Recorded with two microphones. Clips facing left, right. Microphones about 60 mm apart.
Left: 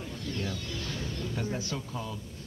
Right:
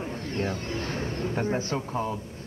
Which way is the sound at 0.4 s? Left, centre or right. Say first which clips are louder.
Right 9 dB; right.